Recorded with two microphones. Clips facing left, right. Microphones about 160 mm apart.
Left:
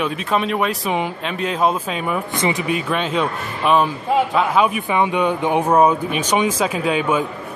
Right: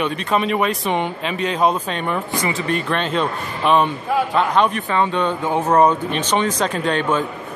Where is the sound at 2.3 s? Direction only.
20° left (ahead or behind).